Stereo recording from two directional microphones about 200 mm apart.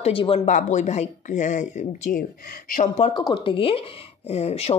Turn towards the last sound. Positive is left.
turn(degrees=30)  # may be behind; listen again after turning